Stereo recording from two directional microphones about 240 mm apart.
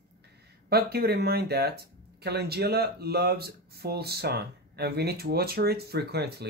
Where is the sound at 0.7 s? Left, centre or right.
Right.